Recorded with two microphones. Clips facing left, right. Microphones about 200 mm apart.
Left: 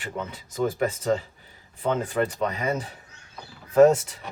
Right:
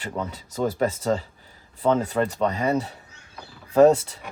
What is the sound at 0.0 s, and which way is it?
Speech, 40° right (ahead or behind).